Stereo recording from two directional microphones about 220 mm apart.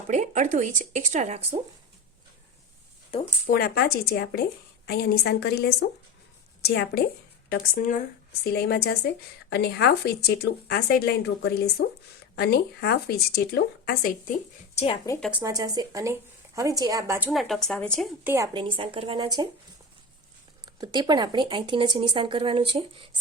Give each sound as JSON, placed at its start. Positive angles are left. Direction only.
{"t": 0.1, "sound": "speech", "side_deg": -35}
{"t": 3.1, "sound": "speech", "side_deg": 25}
{"t": 3.5, "sound": "a woman's voice", "side_deg": 45}
{"t": 8.5, "sound": "speech", "side_deg": 45}
{"t": 15.2, "sound": "speech", "side_deg": -5}
{"t": 18.5, "sound": "speech", "side_deg": -20}
{"t": 20.7, "sound": "speech", "side_deg": -20}